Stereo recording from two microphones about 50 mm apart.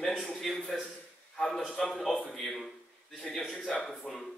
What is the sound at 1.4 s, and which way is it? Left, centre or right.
Speech, centre.